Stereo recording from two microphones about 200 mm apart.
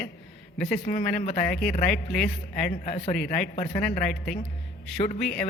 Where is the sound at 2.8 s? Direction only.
30° left (ahead or behind).